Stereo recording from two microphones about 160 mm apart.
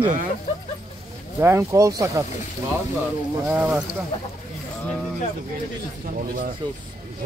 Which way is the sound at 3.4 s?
10° right (ahead or behind).